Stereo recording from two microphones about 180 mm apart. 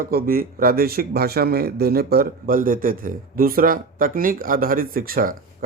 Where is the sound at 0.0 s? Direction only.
55° right (ahead or behind).